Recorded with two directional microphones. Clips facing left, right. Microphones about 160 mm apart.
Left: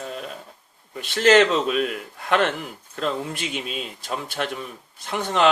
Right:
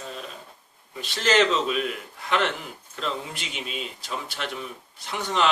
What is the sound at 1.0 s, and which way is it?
Speech, 55° left (ahead or behind).